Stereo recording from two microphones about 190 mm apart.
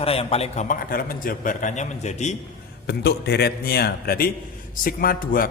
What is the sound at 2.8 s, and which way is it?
A man's voice, 60° left (ahead or behind).